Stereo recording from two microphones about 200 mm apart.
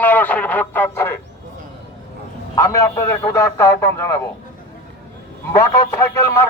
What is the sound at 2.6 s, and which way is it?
A man's voice, 15° left (ahead or behind).